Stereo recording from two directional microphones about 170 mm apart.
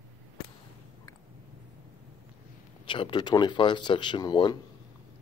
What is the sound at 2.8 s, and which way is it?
Speech, 30° left (ahead or behind).